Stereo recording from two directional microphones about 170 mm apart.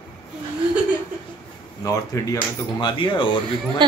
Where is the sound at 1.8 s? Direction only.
20° left (ahead or behind).